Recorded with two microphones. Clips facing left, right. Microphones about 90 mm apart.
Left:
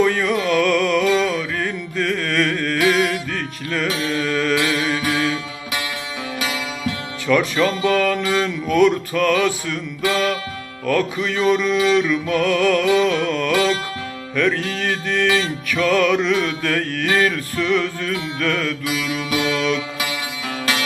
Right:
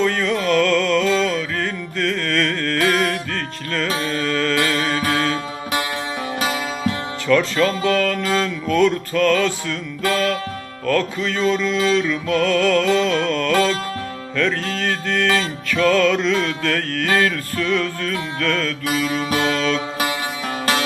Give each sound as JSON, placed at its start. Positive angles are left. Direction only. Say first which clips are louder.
{"t": 0.0, "sound": "music", "louder": "left 1 dB", "side_deg": 15}
{"t": 6.4, "sound": "music", "louder": "right 3 dB", "side_deg": -35}
{"t": 7.3, "sound": "music", "louder": "even", "side_deg": 15}
{"t": 10.8, "sound": "music", "louder": "even", "side_deg": 15}
{"t": 18.9, "sound": "music", "louder": "right 2 dB", "side_deg": -40}